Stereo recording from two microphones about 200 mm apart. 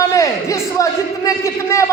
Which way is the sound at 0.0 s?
15° left (ahead or behind).